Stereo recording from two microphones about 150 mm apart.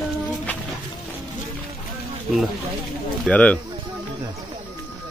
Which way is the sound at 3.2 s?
10° left (ahead or behind).